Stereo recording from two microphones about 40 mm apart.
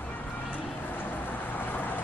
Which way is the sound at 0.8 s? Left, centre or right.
Left.